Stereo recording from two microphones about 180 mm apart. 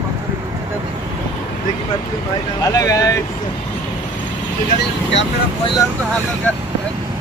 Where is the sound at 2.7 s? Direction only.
20° left (ahead or behind).